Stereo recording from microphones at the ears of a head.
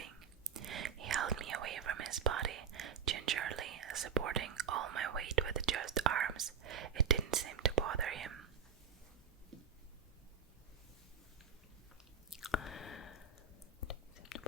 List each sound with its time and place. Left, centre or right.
0.0 s whispering: right
12.3 s chewing: left